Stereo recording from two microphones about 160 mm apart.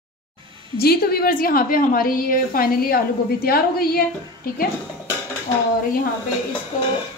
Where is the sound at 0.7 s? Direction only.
75° left (ahead or behind).